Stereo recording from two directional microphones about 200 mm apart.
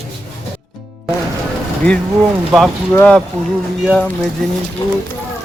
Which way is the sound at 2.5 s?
5° left (ahead or behind).